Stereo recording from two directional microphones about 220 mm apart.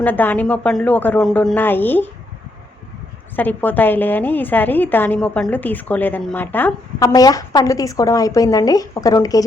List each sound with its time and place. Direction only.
0.0 s a woman's voice: 10° left (ahead or behind)
3.3 s a woman's voice: 10° left (ahead or behind)